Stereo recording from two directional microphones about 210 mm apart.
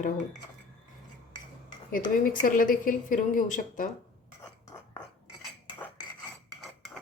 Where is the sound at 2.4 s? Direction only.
40° left (ahead or behind).